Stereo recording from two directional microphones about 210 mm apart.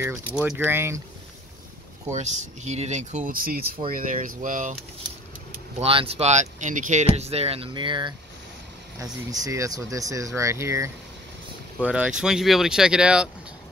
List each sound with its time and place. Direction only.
0.4 s speech: 5° right (ahead or behind)
2.1 s speech: 35° right (ahead or behind)
5.8 s speech: 25° right (ahead or behind); by 13.3 s 5° right (ahead or behind)